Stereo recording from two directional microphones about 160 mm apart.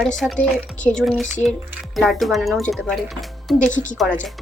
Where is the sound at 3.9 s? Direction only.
Centre (ahead or behind).